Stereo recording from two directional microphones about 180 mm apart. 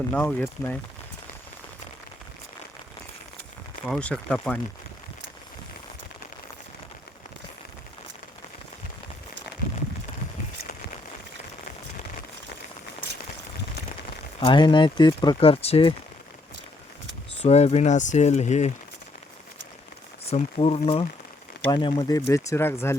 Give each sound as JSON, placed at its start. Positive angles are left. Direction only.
{"t": 0.1, "sound": "speech", "side_deg": 5}
{"t": 3.8, "sound": "speech", "side_deg": 5}
{"t": 14.3, "sound": "speech", "side_deg": 30}
{"t": 17.4, "sound": "speech", "side_deg": 35}
{"t": 20.3, "sound": "speech", "side_deg": 35}